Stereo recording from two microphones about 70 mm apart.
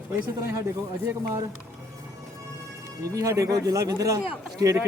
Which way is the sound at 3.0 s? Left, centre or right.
Right.